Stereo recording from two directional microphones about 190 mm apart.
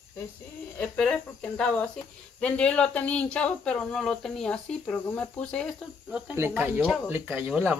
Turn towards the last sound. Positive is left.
turn(degrees=-10)  # may be behind; listen again after turning